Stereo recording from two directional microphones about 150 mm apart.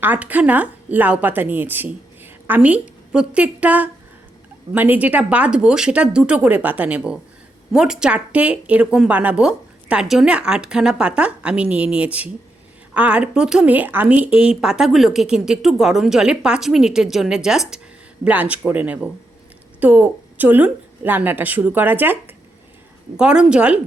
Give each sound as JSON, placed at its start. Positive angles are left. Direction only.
{"t": 0.0, "sound": "a woman's voice", "side_deg": -10}